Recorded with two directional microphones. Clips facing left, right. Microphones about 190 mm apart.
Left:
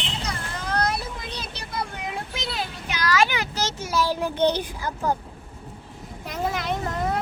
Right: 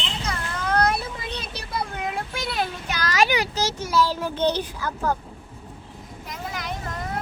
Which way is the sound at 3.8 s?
15° left (ahead or behind).